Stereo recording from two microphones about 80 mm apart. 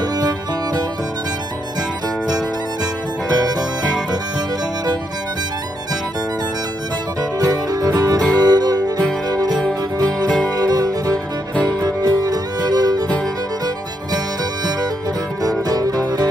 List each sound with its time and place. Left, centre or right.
7.3 s music: right
10.6 s music: right
15.7 s music: right